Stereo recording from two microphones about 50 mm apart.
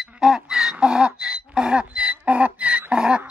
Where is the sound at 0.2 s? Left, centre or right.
Centre.